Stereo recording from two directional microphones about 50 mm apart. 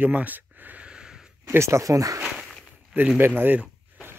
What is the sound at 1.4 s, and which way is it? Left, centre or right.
Speech, right.